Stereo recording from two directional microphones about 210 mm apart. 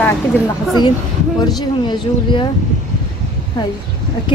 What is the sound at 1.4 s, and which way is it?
A woman's voice, 20° left (ahead or behind).